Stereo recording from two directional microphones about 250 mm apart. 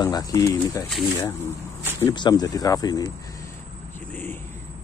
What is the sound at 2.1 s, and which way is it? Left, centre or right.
Speech, centre.